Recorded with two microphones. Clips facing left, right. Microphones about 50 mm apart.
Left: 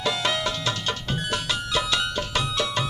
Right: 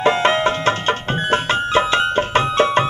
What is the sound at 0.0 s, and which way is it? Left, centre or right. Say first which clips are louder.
Music: right 10 dB; right.